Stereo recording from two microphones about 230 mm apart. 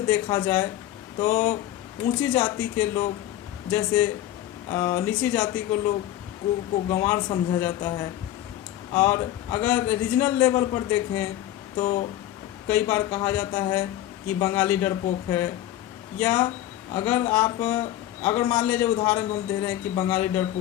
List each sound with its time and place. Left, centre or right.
0.1 s a man's voice: centre